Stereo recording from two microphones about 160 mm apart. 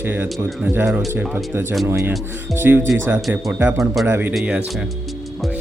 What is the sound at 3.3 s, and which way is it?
Speech, 15° right (ahead or behind).